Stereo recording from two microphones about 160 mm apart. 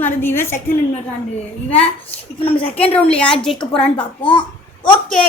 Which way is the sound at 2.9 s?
5° left (ahead or behind).